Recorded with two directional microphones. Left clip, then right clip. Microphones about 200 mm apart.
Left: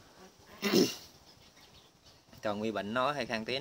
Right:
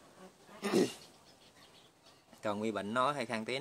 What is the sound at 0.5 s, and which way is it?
Goat, 40° left (ahead or behind).